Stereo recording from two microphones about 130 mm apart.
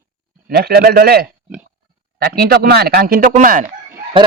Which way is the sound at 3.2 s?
90° right.